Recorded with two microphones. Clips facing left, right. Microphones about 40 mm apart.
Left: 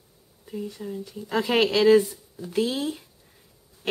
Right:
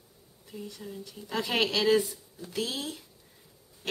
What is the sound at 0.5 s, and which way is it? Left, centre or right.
Speech, left.